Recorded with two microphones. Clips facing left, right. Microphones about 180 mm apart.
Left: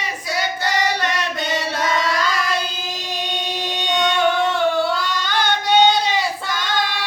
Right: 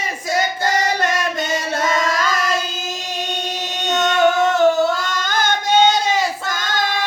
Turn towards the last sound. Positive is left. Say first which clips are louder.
# right 1 dB
turn(degrees=-45)  # may be behind; listen again after turning